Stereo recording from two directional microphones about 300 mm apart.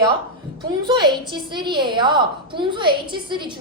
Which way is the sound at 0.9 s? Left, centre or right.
Centre.